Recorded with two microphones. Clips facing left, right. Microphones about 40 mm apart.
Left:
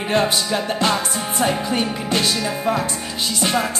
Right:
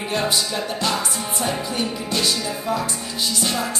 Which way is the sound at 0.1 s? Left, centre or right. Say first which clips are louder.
Left 4 dB; left.